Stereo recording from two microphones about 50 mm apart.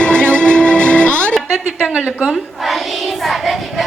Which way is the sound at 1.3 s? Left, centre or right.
Centre.